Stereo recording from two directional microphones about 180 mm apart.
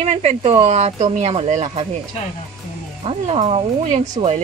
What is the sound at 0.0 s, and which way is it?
Speech, 40° right (ahead or behind).